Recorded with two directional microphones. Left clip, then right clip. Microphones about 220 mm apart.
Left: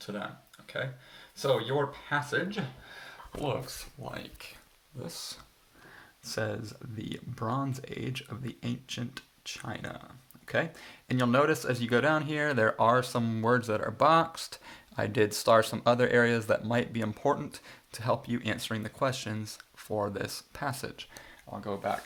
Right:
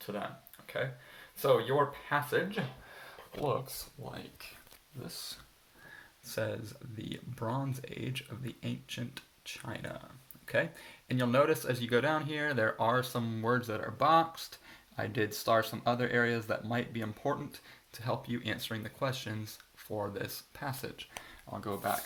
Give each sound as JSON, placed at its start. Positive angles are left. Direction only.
{"t": 0.0, "sound": "speech", "side_deg": 5}
{"t": 1.4, "sound": "speech", "side_deg": 0}
{"t": 4.1, "sound": "speech", "side_deg": 20}
{"t": 6.2, "sound": "speech", "side_deg": 30}
{"t": 21.2, "sound": "speech", "side_deg": 0}